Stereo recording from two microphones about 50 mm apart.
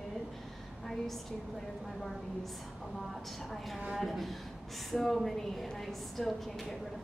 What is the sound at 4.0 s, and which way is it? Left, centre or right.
A woman's voice, centre.